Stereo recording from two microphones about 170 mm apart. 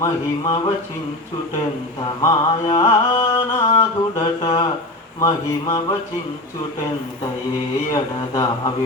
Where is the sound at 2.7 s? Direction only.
30° left (ahead or behind).